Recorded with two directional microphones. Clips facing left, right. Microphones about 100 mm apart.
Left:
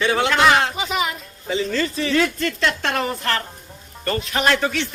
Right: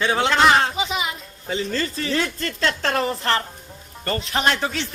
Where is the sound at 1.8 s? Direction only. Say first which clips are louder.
Left 4 dB; 35° right (ahead or behind).